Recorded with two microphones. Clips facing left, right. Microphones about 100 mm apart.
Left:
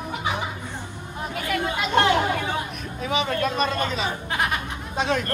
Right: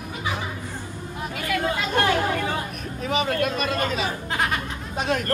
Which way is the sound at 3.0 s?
45° right (ahead or behind).